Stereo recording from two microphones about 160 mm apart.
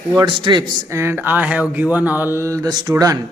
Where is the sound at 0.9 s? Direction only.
15° right (ahead or behind).